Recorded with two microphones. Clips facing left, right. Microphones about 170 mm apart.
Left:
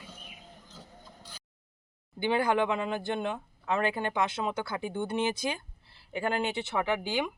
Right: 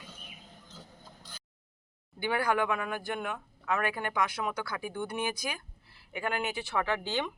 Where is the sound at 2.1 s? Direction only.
20° left (ahead or behind).